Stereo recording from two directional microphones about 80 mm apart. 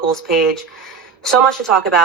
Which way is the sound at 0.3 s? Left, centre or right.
Centre.